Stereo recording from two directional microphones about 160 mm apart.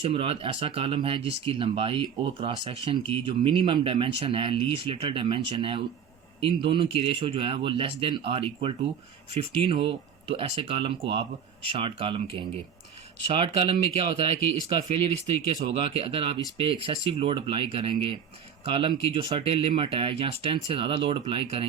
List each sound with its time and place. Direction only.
0.0 s speech: 35° right (ahead or behind)